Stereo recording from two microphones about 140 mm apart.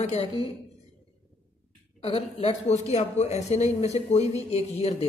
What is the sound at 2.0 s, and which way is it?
Speech, 45° left (ahead or behind).